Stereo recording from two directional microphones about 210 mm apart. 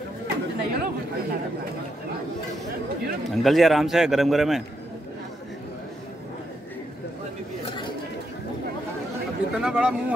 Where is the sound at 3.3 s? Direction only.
Centre (ahead or behind).